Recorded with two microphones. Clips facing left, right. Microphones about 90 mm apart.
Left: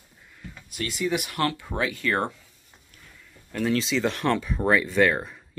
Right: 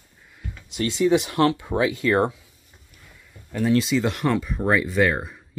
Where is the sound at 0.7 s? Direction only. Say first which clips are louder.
Right 8 dB; 30° right (ahead or behind).